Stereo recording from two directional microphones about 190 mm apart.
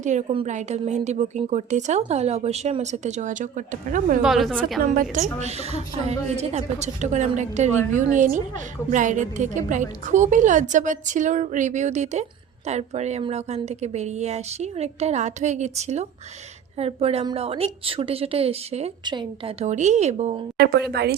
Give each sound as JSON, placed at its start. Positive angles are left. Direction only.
{"t": 0.0, "sound": "a woman's voice", "side_deg": -40}
{"t": 4.2, "sound": "a woman's voice", "side_deg": 0}
{"t": 4.8, "sound": "a woman's voice", "side_deg": -45}
{"t": 20.6, "sound": "speech", "side_deg": -60}